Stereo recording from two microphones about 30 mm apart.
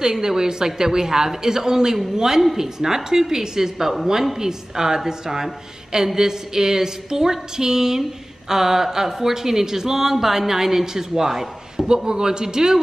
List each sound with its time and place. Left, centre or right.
0.0 s a woman's voice: centre
11.9 s a woman's voice: right